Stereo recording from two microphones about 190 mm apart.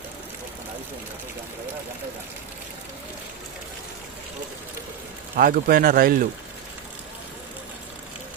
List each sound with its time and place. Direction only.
5.4 s speech: 50° right (ahead or behind)